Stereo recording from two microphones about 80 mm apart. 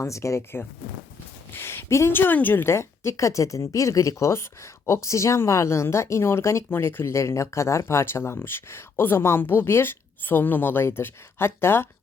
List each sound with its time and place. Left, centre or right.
0.0 s a woman's voice: left